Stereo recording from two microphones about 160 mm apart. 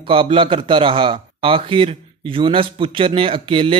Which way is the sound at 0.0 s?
30° right (ahead or behind).